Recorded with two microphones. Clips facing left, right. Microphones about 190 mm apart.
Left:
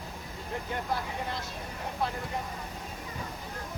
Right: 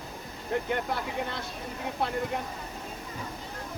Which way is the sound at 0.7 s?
65° right (ahead or behind).